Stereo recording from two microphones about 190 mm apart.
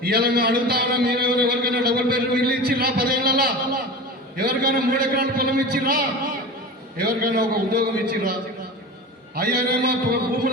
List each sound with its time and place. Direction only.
0.0 s a man's voice: 55° right (ahead or behind)
7.0 s a man's voice: 50° right (ahead or behind)